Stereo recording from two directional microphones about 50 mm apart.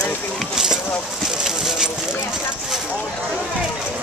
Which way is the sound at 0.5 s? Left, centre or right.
Centre.